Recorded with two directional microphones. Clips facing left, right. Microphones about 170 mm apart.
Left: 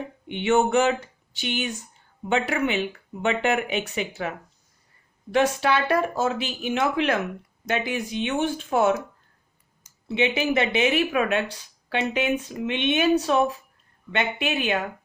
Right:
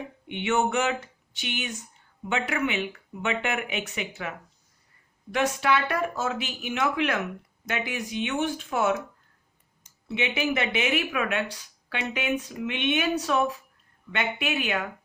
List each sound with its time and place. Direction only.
0.3 s speech: 35° left (ahead or behind)
10.1 s speech: 30° left (ahead or behind)